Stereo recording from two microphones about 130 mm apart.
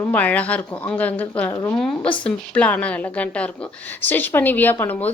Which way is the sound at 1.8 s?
10° left (ahead or behind).